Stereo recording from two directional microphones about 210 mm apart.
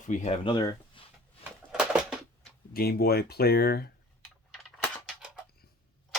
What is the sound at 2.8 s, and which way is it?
Speech, 45° left (ahead or behind).